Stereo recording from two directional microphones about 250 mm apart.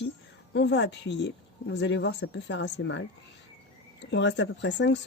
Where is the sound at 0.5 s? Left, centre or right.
Left.